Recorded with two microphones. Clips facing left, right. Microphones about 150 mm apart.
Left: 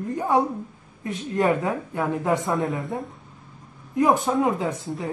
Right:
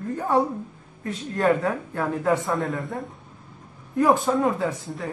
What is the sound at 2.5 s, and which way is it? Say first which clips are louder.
Speech: left 1 dB; centre (ahead or behind).